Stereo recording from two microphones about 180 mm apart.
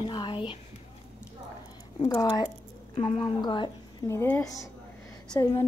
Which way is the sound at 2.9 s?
35° left (ahead or behind).